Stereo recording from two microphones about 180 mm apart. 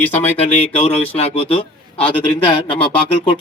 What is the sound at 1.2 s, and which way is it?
A man's voice, 30° left (ahead or behind).